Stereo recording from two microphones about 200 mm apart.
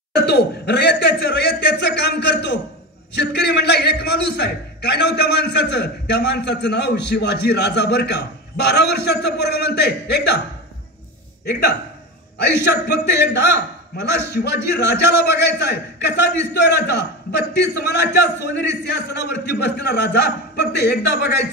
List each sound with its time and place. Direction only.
0.1 s a man's voice: 55° left (ahead or behind)
12.4 s a man's voice: 55° left (ahead or behind)